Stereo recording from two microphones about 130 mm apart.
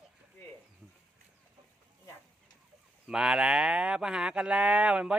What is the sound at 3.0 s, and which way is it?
Speech, 5° right (ahead or behind).